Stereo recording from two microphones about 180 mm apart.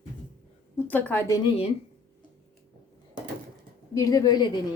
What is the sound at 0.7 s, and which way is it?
Speech, 10° left (ahead or behind).